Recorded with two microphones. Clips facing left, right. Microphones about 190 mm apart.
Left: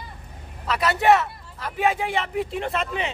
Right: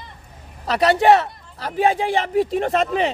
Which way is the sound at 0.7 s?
35° right (ahead or behind).